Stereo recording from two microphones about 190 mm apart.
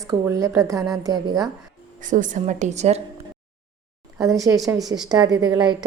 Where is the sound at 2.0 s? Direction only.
40° right (ahead or behind).